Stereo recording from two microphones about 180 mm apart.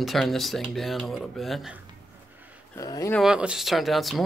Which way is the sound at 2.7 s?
20° left (ahead or behind).